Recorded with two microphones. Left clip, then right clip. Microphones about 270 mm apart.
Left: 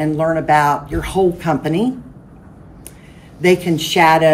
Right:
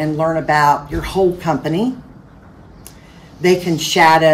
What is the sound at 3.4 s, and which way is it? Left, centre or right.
Speech, centre.